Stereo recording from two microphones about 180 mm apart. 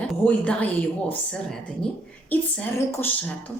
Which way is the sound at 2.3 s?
10° left (ahead or behind).